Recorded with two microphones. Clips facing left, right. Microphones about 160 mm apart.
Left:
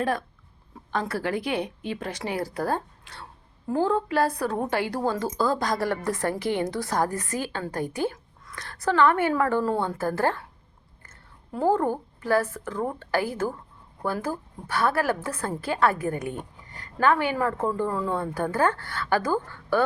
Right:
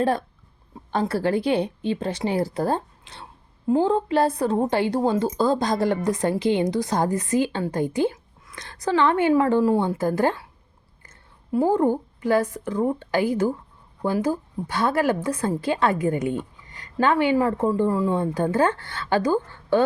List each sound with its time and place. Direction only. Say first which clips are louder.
0.0 s a woman's voice: right 4 dB; 30° right (ahead or behind)